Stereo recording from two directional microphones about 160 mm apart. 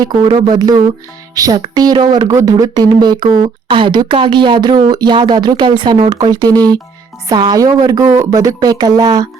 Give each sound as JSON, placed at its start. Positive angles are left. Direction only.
{"t": 0.0, "sound": "speech", "side_deg": -30}